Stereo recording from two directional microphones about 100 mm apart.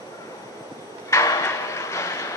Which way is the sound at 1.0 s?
30° left (ahead or behind).